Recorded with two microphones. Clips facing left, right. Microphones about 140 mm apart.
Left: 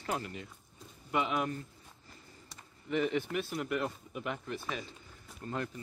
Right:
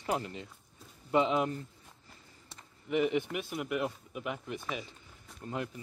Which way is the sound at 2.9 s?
15° right (ahead or behind).